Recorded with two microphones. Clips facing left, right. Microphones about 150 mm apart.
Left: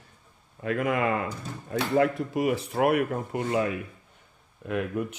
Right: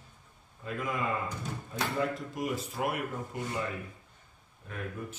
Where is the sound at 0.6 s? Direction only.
75° left (ahead or behind).